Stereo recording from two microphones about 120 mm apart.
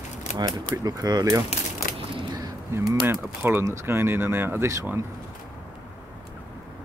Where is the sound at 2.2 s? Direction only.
35° right (ahead or behind).